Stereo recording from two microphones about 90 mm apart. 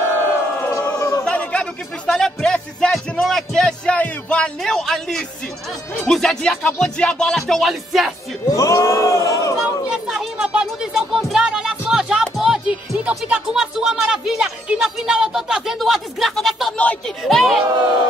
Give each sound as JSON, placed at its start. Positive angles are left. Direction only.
{"t": 0.7, "sound": "a sound", "side_deg": 35}
{"t": 1.2, "sound": "music", "side_deg": 15}
{"t": 4.6, "sound": "speech", "side_deg": 5}
{"t": 8.5, "sound": "speech", "side_deg": 35}
{"t": 9.8, "sound": "music", "side_deg": -5}
{"t": 16.7, "sound": "speech", "side_deg": 15}
{"t": 17.2, "sound": "speech", "side_deg": 0}